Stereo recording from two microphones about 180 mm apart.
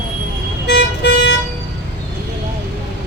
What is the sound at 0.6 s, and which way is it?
Vehicle, 70° left (ahead or behind).